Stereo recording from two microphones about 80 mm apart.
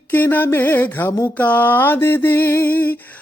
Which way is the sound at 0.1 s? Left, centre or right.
Left.